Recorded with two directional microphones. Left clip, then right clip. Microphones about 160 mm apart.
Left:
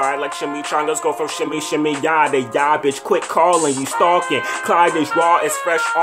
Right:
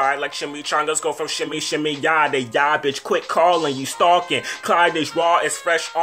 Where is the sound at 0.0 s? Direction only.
15° left (ahead or behind).